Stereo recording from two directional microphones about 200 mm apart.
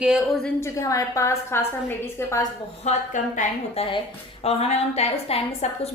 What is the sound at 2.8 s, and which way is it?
A woman's voice, 35° left (ahead or behind).